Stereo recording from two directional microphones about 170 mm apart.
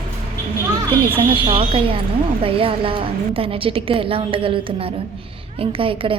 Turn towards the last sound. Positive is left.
turn(degrees=-30)  # may be behind; listen again after turning